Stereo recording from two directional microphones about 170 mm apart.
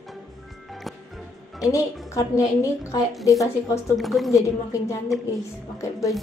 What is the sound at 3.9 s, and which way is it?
Speech, centre (ahead or behind).